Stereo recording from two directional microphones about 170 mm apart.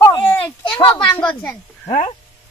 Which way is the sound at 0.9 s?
10° left (ahead or behind).